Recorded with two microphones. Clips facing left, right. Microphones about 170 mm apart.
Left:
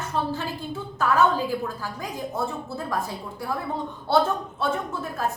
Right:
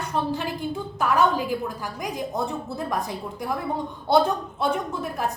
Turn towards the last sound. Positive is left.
turn(degrees=-15)  # may be behind; listen again after turning